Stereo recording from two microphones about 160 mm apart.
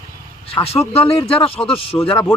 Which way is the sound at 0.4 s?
35° left (ahead or behind).